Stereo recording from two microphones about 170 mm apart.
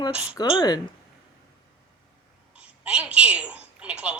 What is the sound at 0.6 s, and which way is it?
Speech, 25° left (ahead or behind).